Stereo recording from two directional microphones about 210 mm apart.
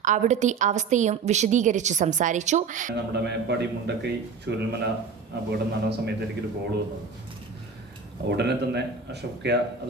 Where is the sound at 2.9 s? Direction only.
55° right (ahead or behind).